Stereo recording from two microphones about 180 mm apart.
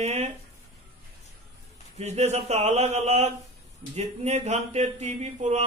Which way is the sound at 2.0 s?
40° right (ahead or behind).